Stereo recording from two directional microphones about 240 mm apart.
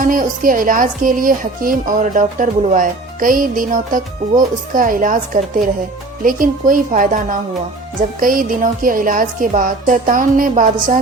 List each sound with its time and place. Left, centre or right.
0.0 s speech: right